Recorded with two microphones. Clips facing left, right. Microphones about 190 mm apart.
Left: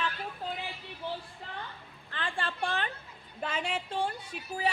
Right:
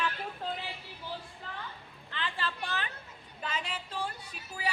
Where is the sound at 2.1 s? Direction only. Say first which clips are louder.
Left 1 dB; 45° left (ahead or behind).